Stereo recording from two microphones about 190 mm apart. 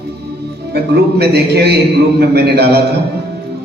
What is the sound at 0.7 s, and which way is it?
Music, 55° right (ahead or behind).